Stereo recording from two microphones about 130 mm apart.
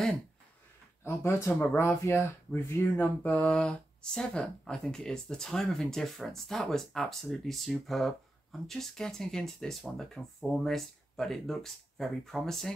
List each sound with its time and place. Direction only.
1.0 s speech: 20° left (ahead or behind); by 12.7 s centre (ahead or behind)